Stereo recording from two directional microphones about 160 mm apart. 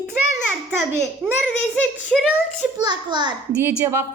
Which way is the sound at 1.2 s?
Centre (ahead or behind).